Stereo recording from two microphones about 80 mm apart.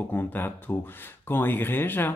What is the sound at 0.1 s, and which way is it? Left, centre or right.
Speech, left.